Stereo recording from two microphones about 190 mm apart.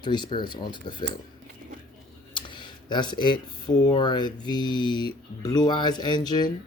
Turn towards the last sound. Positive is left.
turn(degrees=20)  # may be behind; listen again after turning